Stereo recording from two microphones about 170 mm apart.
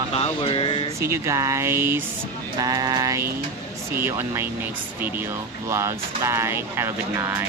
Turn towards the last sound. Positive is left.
turn(degrees=-15)  # may be behind; listen again after turning